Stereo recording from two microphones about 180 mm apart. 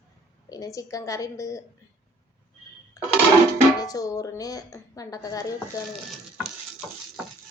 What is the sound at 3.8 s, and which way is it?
A woman's voice, 20° left (ahead or behind).